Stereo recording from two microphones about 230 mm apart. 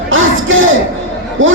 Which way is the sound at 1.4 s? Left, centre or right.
Right.